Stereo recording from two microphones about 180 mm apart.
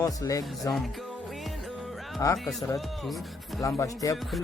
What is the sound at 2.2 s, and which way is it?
Speech, 15° left (ahead or behind).